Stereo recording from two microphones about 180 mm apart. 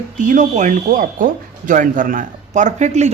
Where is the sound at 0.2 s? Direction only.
45° right (ahead or behind).